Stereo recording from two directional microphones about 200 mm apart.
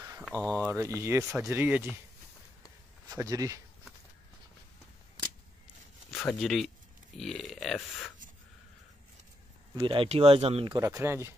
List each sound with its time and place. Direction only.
0.2 s speech: 5° left (ahead or behind)
0.7 s speech: 15° right (ahead or behind)
3.1 s speech: 15° right (ahead or behind)
6.1 s speech: centre (ahead or behind)
9.8 s speech: 25° right (ahead or behind)
10.8 s speech: 15° right (ahead or behind)